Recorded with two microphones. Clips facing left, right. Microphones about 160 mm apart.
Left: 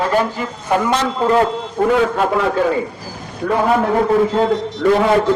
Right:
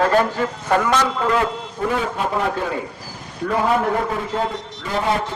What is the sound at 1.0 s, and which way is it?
Speech, 30° left (ahead or behind).